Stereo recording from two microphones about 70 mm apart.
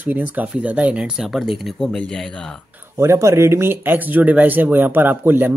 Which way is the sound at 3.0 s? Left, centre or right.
Right.